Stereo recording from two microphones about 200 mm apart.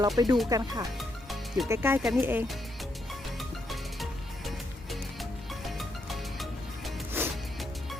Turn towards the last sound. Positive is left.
turn(degrees=0)  # may be behind; listen again after turning